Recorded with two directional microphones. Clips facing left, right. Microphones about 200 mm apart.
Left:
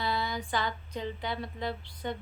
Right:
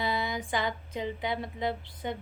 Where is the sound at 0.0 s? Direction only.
20° right (ahead or behind).